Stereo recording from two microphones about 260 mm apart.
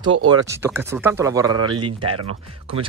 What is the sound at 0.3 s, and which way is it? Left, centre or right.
Speech, centre.